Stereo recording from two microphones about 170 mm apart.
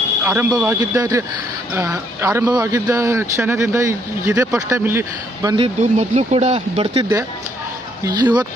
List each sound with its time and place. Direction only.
0.3 s speech: 15° right (ahead or behind)
5.6 s speech: 40° right (ahead or behind)
6.9 s speech: 20° right (ahead or behind)